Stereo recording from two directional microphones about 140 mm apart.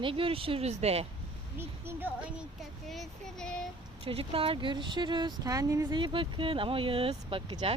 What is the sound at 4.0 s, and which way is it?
Speech, 40° right (ahead or behind).